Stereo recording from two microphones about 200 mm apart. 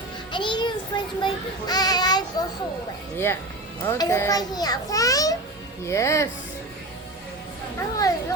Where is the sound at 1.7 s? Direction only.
20° left (ahead or behind).